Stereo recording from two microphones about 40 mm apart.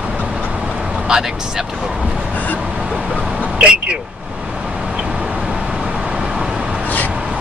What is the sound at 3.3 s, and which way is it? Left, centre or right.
Vehicle, right.